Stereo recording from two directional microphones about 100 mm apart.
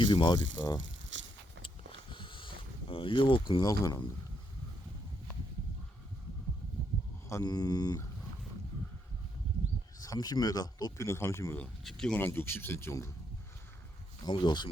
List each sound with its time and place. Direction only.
0.0 s speech: 50° left (ahead or behind)
1.6 s boat: 55° left (ahead or behind)
3.7 s speech: 40° left (ahead or behind)
7.4 s speech: 40° left (ahead or behind)
10.0 s speech: 40° left (ahead or behind)
11.0 s speech: 30° left (ahead or behind)
11.8 s speech: 5° left (ahead or behind)
12.2 s speech: 20° left (ahead or behind)
14.3 s speech: 50° left (ahead or behind)